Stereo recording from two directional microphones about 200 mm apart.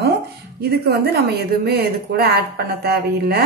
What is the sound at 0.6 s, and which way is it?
A woman's voice, 50° right (ahead or behind).